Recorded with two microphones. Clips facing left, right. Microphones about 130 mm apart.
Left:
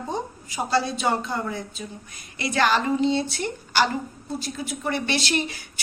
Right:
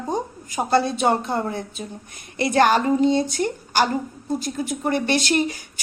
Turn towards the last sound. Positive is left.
turn(degrees=-50)  # may be behind; listen again after turning